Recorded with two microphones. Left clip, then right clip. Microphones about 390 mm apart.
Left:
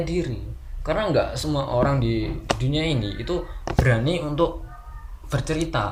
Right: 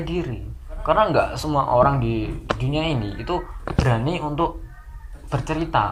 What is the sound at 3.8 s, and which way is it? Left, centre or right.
Speech, centre.